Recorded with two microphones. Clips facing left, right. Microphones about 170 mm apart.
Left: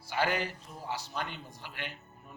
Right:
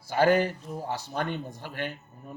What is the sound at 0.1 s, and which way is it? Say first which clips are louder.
Speech: right 9 dB; 45° right (ahead or behind).